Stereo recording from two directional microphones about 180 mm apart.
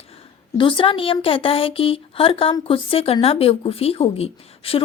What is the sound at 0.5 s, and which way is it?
Speech, 30° left (ahead or behind).